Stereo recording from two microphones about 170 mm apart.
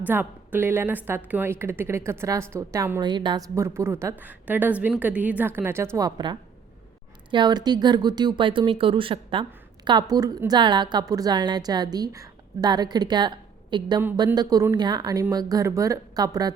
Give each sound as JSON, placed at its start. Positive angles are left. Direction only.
{"t": 0.1, "sound": "a woman's voice", "side_deg": -10}